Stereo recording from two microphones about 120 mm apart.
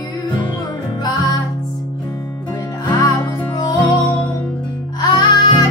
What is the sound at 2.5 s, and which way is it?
Music, 30° left (ahead or behind).